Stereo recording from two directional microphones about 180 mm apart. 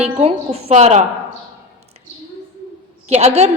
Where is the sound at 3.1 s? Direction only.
35° right (ahead or behind).